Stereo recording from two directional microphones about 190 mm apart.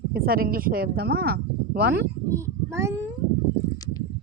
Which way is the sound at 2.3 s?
15° right (ahead or behind).